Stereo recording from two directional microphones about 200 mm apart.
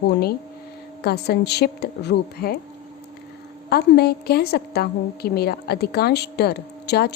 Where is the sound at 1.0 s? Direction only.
55° left (ahead or behind).